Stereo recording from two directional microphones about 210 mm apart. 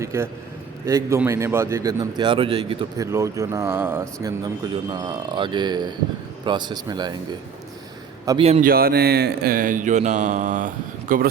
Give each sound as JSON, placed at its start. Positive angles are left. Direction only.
{"t": 0.0, "sound": "a man's voice", "side_deg": -15}
{"t": 3.1, "sound": "a man's voice", "side_deg": -15}
{"t": 8.2, "sound": "a man's voice", "side_deg": -15}
{"t": 8.6, "sound": "speech", "side_deg": -45}